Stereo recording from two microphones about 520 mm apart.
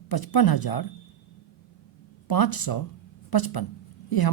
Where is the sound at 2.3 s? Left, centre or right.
Left.